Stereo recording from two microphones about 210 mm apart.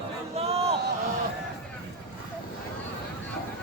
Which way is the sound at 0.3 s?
30° right (ahead or behind).